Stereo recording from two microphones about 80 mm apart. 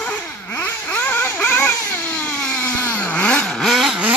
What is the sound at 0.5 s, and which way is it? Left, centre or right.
Vehicle, left.